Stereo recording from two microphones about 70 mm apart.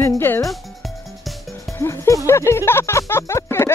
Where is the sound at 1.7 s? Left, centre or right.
Left.